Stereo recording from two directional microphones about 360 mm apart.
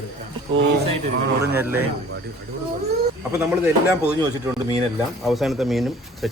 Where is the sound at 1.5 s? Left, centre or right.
Centre.